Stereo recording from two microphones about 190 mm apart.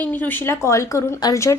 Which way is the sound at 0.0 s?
10° left (ahead or behind).